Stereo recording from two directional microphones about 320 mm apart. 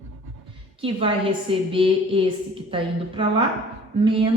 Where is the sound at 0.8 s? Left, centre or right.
Centre.